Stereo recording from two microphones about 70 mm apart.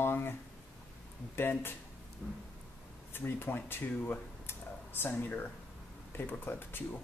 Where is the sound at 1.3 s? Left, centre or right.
Left.